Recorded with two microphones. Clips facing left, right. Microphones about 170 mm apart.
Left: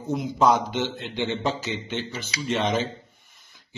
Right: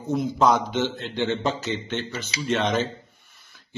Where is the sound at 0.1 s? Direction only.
10° left (ahead or behind).